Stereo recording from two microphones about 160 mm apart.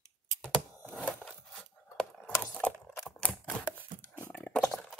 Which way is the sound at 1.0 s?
5° left (ahead or behind).